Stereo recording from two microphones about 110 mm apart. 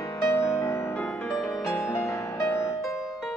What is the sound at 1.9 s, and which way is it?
Music, 25° left (ahead or behind).